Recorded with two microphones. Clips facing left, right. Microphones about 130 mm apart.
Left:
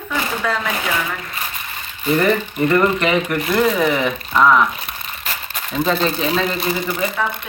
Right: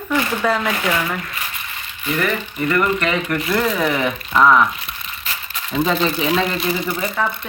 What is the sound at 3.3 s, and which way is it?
Speech, 5° left (ahead or behind).